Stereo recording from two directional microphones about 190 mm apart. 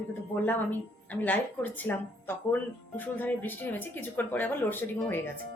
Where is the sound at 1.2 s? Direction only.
10° left (ahead or behind).